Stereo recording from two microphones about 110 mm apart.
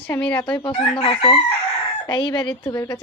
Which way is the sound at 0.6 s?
45° left (ahead or behind).